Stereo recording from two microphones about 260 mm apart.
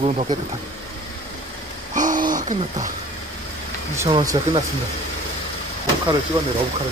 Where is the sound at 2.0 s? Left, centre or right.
Right.